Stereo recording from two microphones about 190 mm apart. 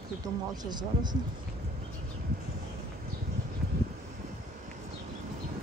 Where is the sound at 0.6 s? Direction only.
20° right (ahead or behind).